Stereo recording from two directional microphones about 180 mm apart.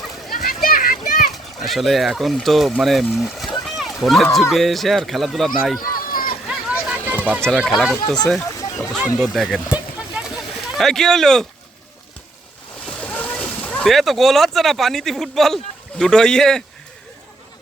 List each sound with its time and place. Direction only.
0.3 s children playing: 50° left (ahead or behind)
1.3 s speech: centre (ahead or behind)
3.6 s run: centre (ahead or behind)
4.5 s speech: centre (ahead or behind)
6.0 s a sound: 50° left (ahead or behind)
6.5 s a sound: 5° right (ahead or behind)
7.1 s music: 10° right (ahead or behind)
7.4 s speech: 5° left (ahead or behind)
7.9 s speech: 15° left (ahead or behind)
8.4 s a sound: 15° left (ahead or behind)
9.1 s a sound: centre (ahead or behind)
10.8 s speech: centre (ahead or behind)
12.8 s speech: 5° left (ahead or behind)